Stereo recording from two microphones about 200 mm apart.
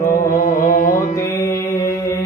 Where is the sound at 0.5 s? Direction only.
40° left (ahead or behind).